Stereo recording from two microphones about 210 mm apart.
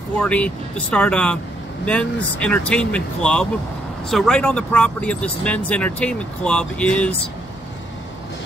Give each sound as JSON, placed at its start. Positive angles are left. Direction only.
{"t": 0.2, "sound": "speech", "side_deg": 5}